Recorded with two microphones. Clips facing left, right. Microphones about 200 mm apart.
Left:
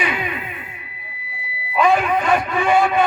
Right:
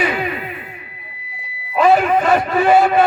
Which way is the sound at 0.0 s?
40° right (ahead or behind).